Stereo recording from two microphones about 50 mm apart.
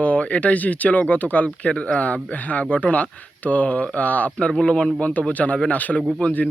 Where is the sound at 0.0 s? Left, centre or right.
Left.